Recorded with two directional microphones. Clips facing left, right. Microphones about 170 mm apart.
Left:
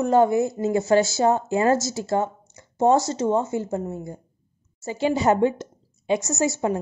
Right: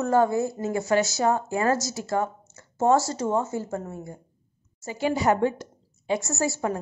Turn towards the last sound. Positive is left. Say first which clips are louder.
# left 3 dB
turn(degrees=20)  # may be behind; listen again after turning